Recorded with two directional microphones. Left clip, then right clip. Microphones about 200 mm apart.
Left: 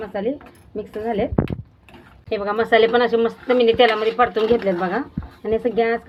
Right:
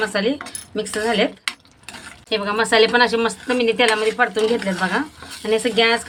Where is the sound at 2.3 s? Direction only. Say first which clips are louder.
Even; 10° right (ahead or behind).